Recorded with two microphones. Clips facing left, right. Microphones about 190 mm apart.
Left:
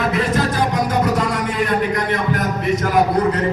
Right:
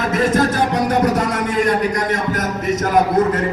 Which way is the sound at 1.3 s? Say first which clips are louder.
Right 2 dB; 45° right (ahead or behind).